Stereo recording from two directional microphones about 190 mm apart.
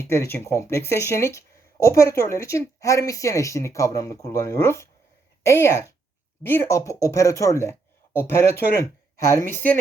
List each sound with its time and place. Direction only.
0.0 s speech: 15° left (ahead or behind)